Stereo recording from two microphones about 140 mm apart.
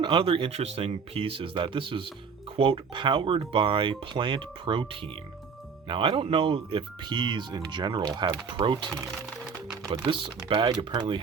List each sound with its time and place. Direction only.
0.0 s speech: 35° right (ahead or behind)
9.9 s speech: 35° right (ahead or behind)